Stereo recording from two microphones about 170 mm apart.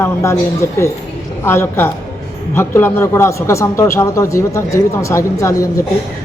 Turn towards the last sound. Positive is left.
turn(degrees=20)  # may be behind; listen again after turning